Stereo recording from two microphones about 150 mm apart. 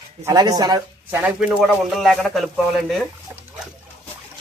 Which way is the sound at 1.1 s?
10° right (ahead or behind).